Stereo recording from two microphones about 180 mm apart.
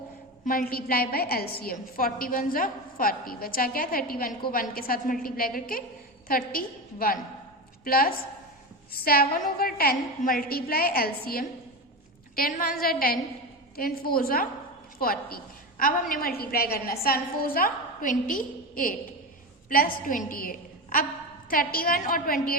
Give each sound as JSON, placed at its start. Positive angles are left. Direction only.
{"t": 0.4, "sound": "a woman's voice", "side_deg": 50}